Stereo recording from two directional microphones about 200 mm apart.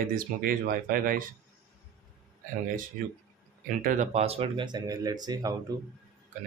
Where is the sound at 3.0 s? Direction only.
45° right (ahead or behind); by 5.5 s 20° right (ahead or behind).